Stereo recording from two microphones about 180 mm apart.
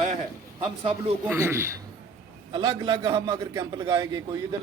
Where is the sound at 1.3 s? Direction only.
15° right (ahead or behind).